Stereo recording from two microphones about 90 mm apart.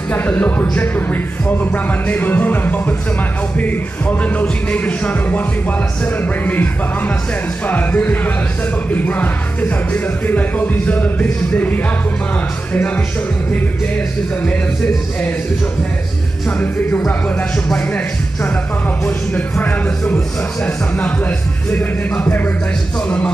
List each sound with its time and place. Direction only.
0.1 s speech: 15° left (ahead or behind)
16.4 s speech: 20° left (ahead or behind)
21.6 s speech: 15° left (ahead or behind)